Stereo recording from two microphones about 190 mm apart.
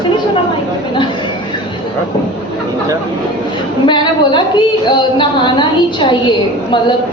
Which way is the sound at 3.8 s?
25° left (ahead or behind).